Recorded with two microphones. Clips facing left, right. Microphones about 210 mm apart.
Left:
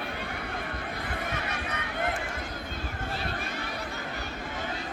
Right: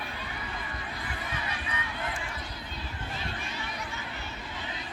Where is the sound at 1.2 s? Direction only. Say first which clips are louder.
Left 3 dB; 70° left (ahead or behind).